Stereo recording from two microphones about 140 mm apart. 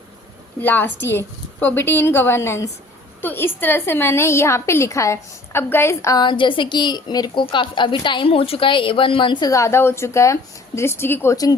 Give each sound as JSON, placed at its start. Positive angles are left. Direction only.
{"t": 0.6, "sound": "a woman's voice", "side_deg": 15}